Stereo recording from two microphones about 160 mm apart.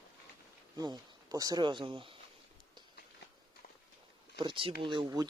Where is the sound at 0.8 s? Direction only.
25° right (ahead or behind).